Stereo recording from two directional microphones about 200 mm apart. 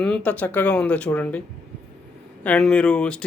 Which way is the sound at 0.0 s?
5° left (ahead or behind).